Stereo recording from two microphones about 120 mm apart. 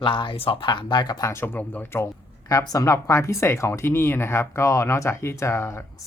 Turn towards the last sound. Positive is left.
turn(degrees=20)  # may be behind; listen again after turning